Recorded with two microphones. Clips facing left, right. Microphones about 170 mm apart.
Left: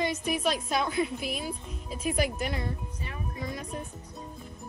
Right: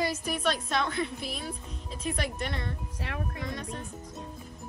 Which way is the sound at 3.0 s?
85° right.